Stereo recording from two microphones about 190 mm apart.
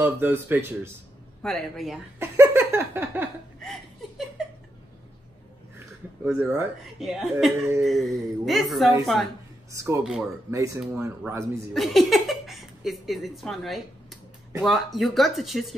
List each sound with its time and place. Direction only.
0.0 s speech: 10° right (ahead or behind)
1.4 s speech: centre (ahead or behind)
2.1 s a sound: 15° right (ahead or behind)
6.2 s speech: 10° right (ahead or behind)
9.7 s speech: 15° right (ahead or behind)
11.7 s speech: centre (ahead or behind)